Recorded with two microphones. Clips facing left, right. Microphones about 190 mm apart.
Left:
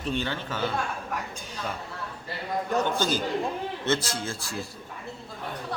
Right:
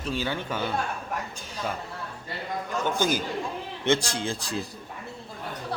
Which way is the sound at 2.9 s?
10° right (ahead or behind).